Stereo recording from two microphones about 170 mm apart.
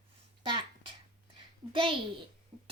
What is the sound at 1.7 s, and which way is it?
Speech, 30° right (ahead or behind).